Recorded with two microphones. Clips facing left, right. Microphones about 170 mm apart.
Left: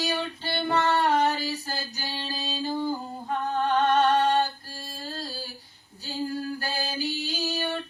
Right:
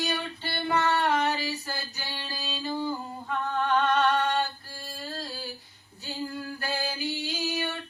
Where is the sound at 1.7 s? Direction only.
40° left (ahead or behind).